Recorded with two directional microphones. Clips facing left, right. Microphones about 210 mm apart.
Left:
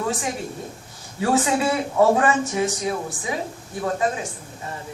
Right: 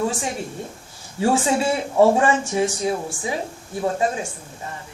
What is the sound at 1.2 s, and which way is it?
A man's voice, 30° right (ahead or behind).